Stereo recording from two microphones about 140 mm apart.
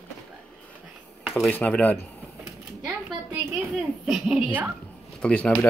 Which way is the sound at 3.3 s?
5° right (ahead or behind).